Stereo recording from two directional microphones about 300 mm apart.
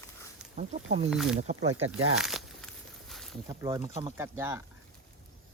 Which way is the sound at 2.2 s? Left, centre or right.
Centre.